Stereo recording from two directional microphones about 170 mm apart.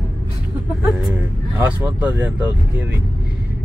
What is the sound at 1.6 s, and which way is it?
Speech, 10° right (ahead or behind).